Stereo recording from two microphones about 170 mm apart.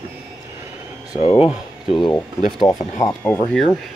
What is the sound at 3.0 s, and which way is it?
Speech, 15° left (ahead or behind).